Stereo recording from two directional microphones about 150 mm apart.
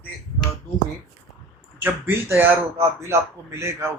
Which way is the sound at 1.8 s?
15° right (ahead or behind).